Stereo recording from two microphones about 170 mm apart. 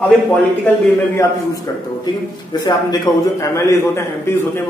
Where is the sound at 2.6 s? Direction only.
20° left (ahead or behind).